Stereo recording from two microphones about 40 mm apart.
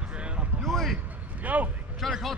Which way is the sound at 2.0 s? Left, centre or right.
Centre.